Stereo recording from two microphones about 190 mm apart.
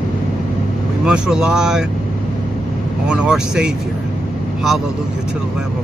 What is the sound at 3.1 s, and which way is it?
Speech, 5° right (ahead or behind).